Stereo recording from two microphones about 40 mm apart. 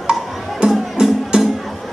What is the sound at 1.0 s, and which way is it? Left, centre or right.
Music, centre.